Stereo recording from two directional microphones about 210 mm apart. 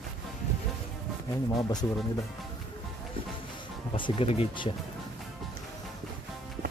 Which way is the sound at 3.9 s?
25° left (ahead or behind).